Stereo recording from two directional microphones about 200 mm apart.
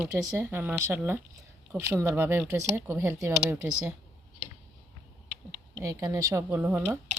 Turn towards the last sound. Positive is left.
turn(degrees=-10)  # may be behind; listen again after turning